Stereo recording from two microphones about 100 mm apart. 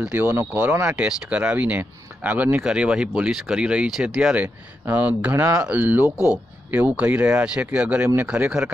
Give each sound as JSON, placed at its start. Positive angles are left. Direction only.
{"t": 0.0, "sound": "speech", "side_deg": -15}
{"t": 0.9, "sound": "speech", "side_deg": -10}